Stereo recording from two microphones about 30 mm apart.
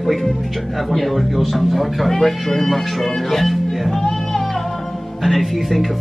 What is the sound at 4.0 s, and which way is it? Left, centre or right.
Music, centre.